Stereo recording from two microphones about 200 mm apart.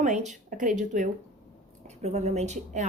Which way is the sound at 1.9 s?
35° right (ahead or behind).